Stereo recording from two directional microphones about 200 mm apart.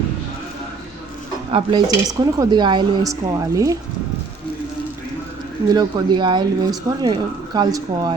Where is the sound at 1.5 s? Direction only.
20° right (ahead or behind).